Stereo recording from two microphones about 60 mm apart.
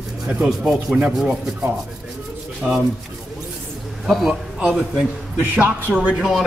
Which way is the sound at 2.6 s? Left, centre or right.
Centre.